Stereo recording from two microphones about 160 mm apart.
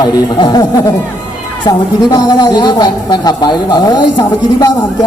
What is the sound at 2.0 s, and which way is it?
Speech, 25° left (ahead or behind).